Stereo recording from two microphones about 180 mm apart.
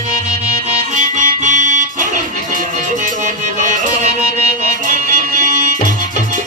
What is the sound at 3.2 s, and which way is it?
Music, 45° right (ahead or behind).